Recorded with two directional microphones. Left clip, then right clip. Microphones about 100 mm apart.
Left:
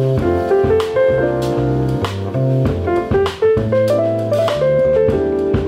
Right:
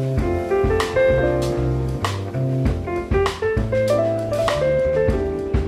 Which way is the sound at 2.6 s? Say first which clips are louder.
Left 9 dB; 35° right (ahead or behind).